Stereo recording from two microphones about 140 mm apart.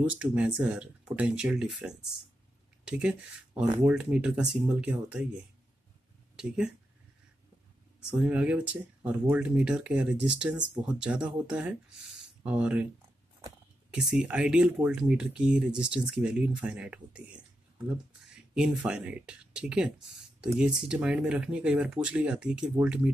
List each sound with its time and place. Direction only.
0.1 s speech: 10° right (ahead or behind)
6.3 s speech: 5° right (ahead or behind)
8.2 s speech: 10° right (ahead or behind)
10.6 s speech: 30° right (ahead or behind)
10.9 s speech: 5° right (ahead or behind)
12.2 s a sound: 10° right (ahead or behind)
13.8 s speech: 5° right (ahead or behind)
18.5 s speech: 5° right (ahead or behind)